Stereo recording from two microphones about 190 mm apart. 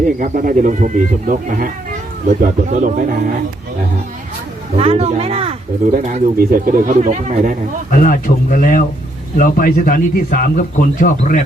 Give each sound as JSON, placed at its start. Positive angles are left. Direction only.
{"t": 0.2, "sound": "speech", "side_deg": -45}
{"t": 4.8, "sound": "speech", "side_deg": -35}
{"t": 5.9, "sound": "speech", "side_deg": -45}
{"t": 7.9, "sound": "speech", "side_deg": 45}